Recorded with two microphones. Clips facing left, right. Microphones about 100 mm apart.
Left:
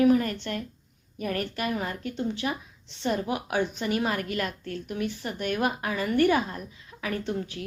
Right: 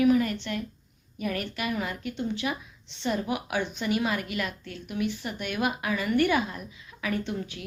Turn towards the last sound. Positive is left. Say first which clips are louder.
# left 1 dB
turn(degrees=35)  # may be behind; listen again after turning